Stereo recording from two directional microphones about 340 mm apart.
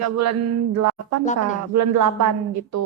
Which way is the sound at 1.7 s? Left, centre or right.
Right.